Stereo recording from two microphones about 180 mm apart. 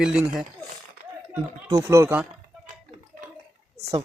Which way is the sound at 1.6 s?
20° right (ahead or behind).